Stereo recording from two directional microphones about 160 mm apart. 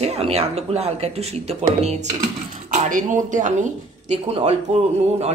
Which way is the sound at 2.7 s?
55° right (ahead or behind).